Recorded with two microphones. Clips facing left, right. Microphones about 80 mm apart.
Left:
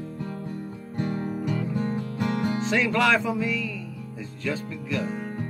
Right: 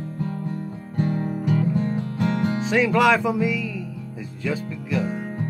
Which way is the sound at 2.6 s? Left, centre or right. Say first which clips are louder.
Right 5 dB; centre.